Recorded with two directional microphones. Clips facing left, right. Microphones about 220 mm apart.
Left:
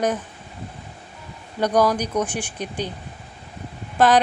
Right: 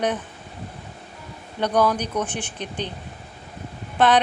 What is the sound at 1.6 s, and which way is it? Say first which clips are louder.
A woman's voice: left 2 dB; 10° left (ahead or behind).